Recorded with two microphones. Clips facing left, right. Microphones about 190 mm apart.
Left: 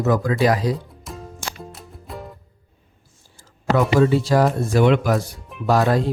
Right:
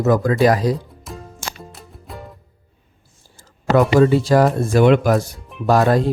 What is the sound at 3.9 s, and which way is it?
Speech, 50° right (ahead or behind).